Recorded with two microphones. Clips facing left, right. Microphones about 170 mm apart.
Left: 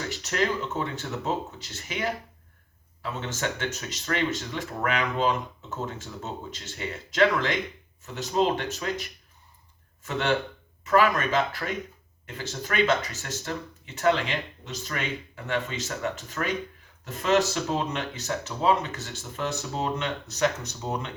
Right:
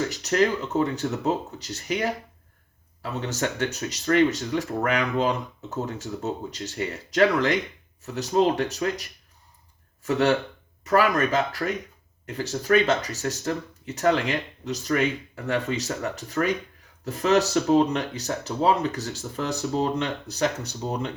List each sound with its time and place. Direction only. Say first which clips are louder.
0.1 s speech: right 5 dB; 40° right (ahead or behind)
10.0 s speech: right 5 dB; 40° right (ahead or behind)